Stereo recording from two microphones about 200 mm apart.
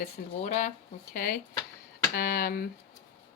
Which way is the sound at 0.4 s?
35° left (ahead or behind).